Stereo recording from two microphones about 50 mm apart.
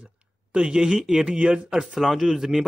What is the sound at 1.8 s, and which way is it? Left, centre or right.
Speech, centre.